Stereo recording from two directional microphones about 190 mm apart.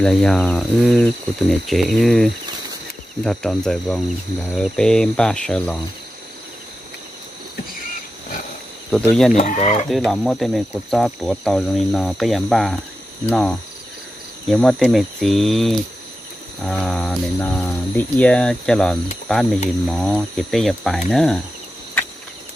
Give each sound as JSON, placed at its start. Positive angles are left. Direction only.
{"t": 0.0, "sound": "speech", "side_deg": 5}
{"t": 8.9, "sound": "speech", "side_deg": 0}
{"t": 9.3, "sound": "speech", "side_deg": 35}
{"t": 9.8, "sound": "speech", "side_deg": 0}